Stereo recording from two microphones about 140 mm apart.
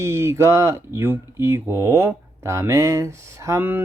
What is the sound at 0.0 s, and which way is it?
Speech, 20° right (ahead or behind).